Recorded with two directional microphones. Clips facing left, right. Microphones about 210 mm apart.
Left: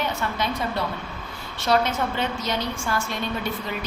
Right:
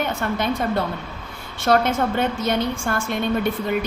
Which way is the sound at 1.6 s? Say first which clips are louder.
Right 4 dB; 50° right (ahead or behind).